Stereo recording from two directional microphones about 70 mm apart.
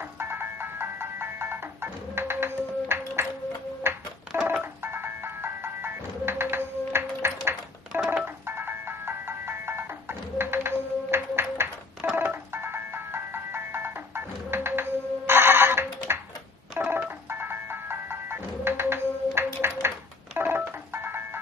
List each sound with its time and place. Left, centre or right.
0.0 s music: right
3.9 s telephone: right
4.3 s music: right
7.9 s telephone dialing: centre
8.5 s music: right